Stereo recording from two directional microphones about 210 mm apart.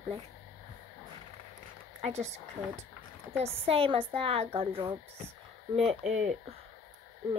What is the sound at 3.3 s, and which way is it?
Speech, 25° right (ahead or behind).